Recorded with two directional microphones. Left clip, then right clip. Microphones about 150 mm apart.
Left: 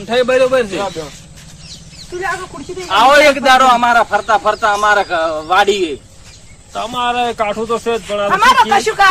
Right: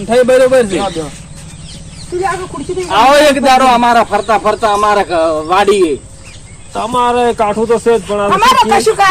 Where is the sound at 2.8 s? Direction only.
Centre (ahead or behind).